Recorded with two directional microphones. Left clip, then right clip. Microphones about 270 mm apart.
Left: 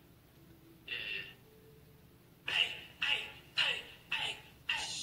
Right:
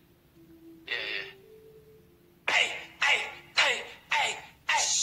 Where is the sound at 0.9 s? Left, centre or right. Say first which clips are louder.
Right 7 dB; right.